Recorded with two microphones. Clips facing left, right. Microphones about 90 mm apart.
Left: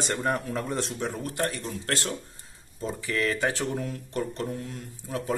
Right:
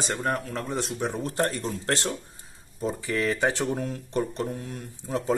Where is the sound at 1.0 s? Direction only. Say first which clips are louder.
Right 3 dB; 20° right (ahead or behind).